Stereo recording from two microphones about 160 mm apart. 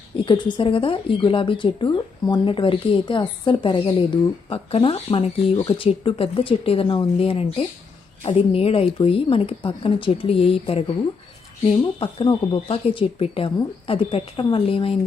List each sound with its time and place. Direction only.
0.3 s speech: 30° left (ahead or behind)
11.9 s speech: 30° left (ahead or behind)